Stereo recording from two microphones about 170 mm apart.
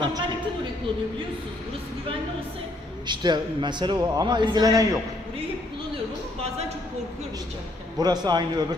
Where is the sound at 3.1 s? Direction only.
25° right (ahead or behind).